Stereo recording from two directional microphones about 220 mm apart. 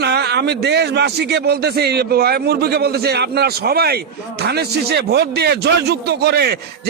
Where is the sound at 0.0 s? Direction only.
50° right (ahead or behind).